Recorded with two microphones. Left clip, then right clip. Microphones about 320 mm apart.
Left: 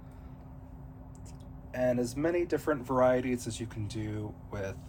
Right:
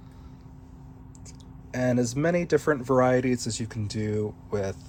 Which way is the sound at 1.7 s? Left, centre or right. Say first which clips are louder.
Right 3 dB; right.